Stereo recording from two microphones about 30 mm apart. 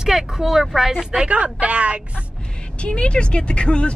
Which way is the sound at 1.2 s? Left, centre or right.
Right.